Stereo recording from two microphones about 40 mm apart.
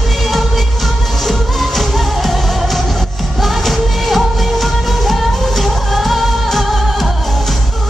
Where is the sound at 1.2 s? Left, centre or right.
Centre.